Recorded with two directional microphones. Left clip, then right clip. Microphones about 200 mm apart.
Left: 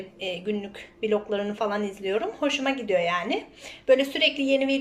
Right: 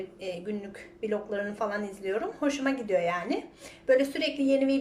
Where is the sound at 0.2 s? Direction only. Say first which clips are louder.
Left 7 dB; centre (ahead or behind).